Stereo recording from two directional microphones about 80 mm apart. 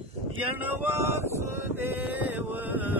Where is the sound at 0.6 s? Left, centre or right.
Right.